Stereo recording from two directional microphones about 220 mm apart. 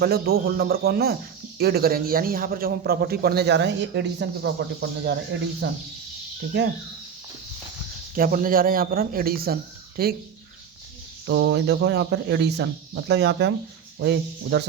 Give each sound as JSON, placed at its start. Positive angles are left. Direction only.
{"t": 0.0, "sound": "a man's voice", "side_deg": -45}
{"t": 8.1, "sound": "a man's voice", "side_deg": -40}
{"t": 11.3, "sound": "a man's voice", "side_deg": -55}